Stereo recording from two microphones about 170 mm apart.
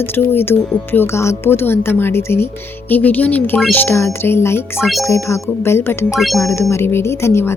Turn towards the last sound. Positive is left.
turn(degrees=15)  # may be behind; listen again after turning